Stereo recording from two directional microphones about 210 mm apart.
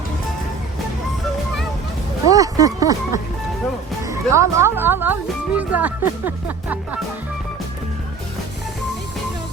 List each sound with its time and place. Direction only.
2.3 s speech: 15° right (ahead or behind)